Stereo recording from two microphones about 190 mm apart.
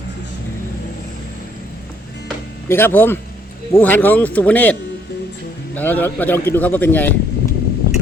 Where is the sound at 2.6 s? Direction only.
10° left (ahead or behind).